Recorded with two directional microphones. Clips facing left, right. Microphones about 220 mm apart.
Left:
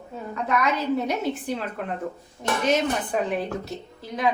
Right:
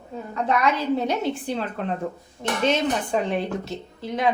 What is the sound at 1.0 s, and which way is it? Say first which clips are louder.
Speech: right 1 dB; 30° right (ahead or behind).